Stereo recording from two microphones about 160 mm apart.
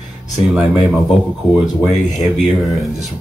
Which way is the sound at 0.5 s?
5° right (ahead or behind).